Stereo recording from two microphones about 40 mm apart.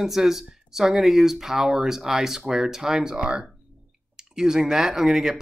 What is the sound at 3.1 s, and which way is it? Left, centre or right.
Speech, right.